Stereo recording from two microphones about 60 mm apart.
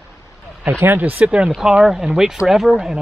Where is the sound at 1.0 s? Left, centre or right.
Right; by 3.0 s centre.